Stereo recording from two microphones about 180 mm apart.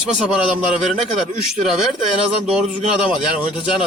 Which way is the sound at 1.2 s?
Centre (ahead or behind).